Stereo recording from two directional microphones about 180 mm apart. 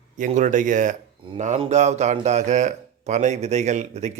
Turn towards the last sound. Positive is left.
turn(degrees=-40)  # may be behind; listen again after turning